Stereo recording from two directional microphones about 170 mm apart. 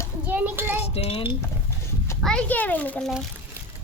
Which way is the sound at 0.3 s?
10° right (ahead or behind).